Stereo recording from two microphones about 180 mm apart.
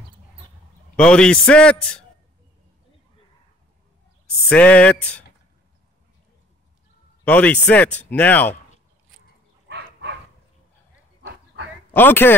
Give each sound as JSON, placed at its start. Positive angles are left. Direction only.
{"t": 0.9, "sound": "a man's voice", "side_deg": 5}
{"t": 4.5, "sound": "speech", "side_deg": 5}
{"t": 7.2, "sound": "speech", "side_deg": 10}
{"t": 9.7, "sound": "dog", "side_deg": -75}
{"t": 11.2, "sound": "dog", "side_deg": -90}
{"t": 11.9, "sound": "speech", "side_deg": 10}